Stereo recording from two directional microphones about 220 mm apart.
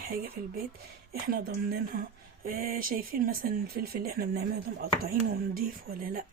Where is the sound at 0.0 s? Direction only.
40° right (ahead or behind).